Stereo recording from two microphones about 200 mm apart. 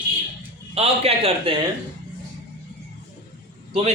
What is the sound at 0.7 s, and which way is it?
Speech, 30° right (ahead or behind).